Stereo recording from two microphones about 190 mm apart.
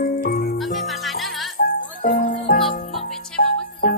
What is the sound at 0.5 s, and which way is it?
Music, centre (ahead or behind).